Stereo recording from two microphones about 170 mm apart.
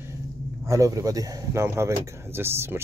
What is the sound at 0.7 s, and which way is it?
Speech, 20° right (ahead or behind).